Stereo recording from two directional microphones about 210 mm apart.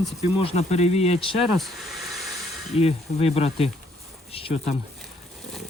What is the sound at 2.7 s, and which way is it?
Speech, 30° left (ahead or behind).